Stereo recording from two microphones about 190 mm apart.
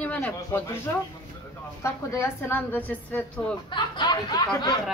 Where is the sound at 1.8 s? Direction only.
15° left (ahead or behind).